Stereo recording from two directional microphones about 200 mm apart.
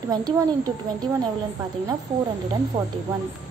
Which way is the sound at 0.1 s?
20° right (ahead or behind).